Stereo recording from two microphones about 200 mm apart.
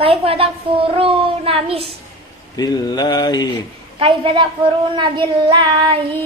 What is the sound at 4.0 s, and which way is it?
A woman's voice, 25° right (ahead or behind).